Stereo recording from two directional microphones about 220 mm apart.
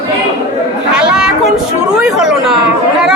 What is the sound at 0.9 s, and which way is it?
A woman's voice, 5° right (ahead or behind).